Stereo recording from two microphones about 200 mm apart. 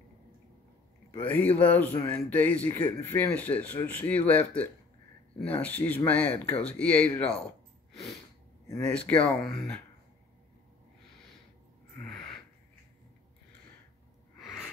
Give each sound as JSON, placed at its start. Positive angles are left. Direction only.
{"t": 1.1, "sound": "speech", "side_deg": 10}
{"t": 8.6, "sound": "speech", "side_deg": 10}